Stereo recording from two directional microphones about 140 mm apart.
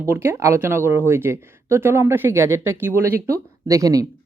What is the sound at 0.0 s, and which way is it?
Speech, 15° right (ahead or behind).